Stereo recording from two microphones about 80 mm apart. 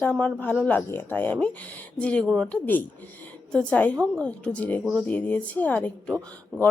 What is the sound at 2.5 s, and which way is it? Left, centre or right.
Speech, left.